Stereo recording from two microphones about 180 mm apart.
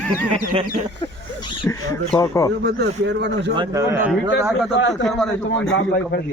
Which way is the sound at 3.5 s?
20° right (ahead or behind).